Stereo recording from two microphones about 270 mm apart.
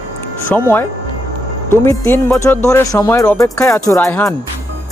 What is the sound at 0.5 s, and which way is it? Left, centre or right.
Speech, centre.